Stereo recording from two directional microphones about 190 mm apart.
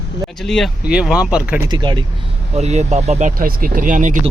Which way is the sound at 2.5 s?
35° right (ahead or behind).